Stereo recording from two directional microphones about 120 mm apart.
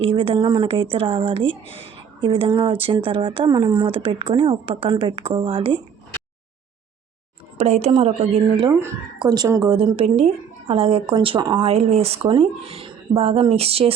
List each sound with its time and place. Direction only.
0.0 s speech: 50° right (ahead or behind)
7.6 s speech: 65° right (ahead or behind)
9.1 s speech: 35° right (ahead or behind); by 11.1 s 55° right (ahead or behind)
11.1 s speech: 45° right (ahead or behind)
11.5 s speech: 55° right (ahead or behind)